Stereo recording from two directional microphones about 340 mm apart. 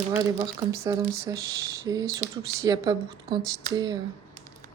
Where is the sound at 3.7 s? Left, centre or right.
Centre.